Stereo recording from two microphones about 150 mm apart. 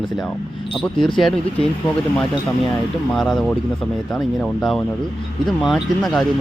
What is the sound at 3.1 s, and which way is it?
Speech, centre (ahead or behind).